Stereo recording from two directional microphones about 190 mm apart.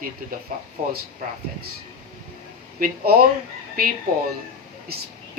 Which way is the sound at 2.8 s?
50° right (ahead or behind).